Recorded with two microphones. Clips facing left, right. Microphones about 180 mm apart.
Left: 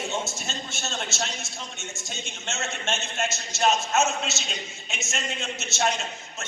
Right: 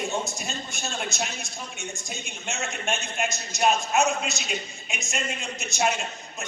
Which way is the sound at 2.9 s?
Centre (ahead or behind).